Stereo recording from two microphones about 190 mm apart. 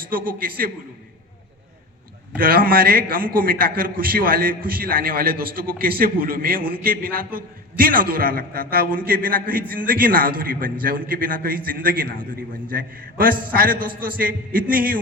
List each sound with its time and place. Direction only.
0.1 s a man's voice: 50° right (ahead or behind)
2.4 s a man's voice: 50° right (ahead or behind)